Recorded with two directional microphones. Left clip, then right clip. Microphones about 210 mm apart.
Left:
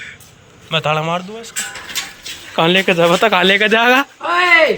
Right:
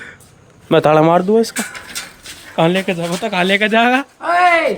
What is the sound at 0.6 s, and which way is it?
Speech, 45° right (ahead or behind).